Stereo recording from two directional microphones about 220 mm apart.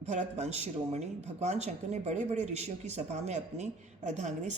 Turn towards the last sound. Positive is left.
turn(degrees=-30)  # may be behind; listen again after turning